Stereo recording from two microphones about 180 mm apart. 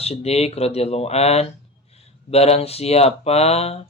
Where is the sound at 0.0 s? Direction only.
35° left (ahead or behind).